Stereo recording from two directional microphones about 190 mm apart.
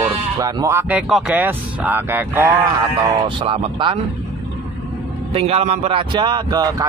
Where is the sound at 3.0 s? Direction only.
25° right (ahead or behind).